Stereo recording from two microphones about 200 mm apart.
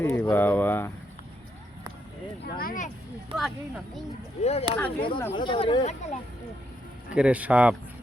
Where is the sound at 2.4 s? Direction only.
45° left (ahead or behind).